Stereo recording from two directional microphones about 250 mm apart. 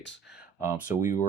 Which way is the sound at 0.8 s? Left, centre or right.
Left.